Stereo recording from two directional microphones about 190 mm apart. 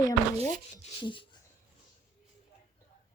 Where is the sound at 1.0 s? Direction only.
25° left (ahead or behind).